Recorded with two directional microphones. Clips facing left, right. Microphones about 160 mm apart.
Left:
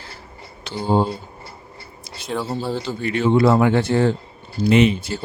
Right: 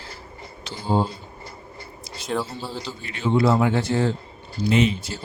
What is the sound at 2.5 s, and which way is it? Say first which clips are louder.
Speech: left 8 dB; 60° left (ahead or behind).